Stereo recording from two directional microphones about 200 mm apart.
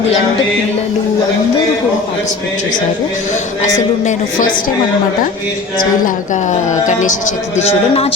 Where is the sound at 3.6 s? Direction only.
35° left (ahead or behind).